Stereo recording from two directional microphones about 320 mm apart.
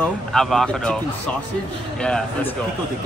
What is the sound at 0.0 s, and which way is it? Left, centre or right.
Speech, centre.